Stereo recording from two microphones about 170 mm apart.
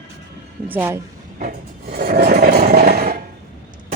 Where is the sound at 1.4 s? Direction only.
60° right (ahead or behind).